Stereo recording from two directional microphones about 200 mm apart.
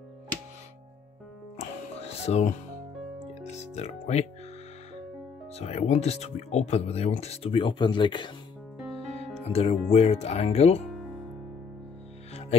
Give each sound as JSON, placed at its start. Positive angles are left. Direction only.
{"t": 1.6, "sound": "music", "side_deg": 30}
{"t": 3.5, "sound": "speech", "side_deg": 35}
{"t": 5.5, "sound": "speech", "side_deg": 30}
{"t": 9.4, "sound": "speech", "side_deg": 30}